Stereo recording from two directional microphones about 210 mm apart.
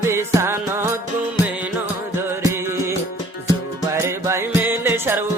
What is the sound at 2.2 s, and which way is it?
Music, 10° right (ahead or behind).